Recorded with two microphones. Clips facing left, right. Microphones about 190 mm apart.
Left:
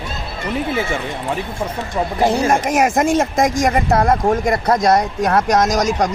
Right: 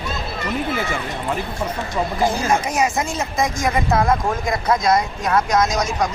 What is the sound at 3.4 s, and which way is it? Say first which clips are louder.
Speech: left 6 dB; 90° left.